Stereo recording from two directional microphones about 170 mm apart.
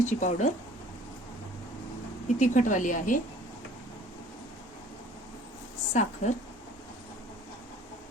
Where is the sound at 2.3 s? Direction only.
45° left (ahead or behind).